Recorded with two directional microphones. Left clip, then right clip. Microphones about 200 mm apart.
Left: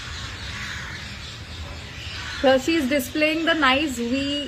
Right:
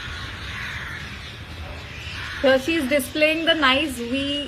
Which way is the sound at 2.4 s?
25° left (ahead or behind).